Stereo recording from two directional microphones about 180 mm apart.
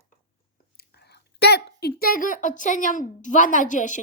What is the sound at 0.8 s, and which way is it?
Speech, 65° left (ahead or behind).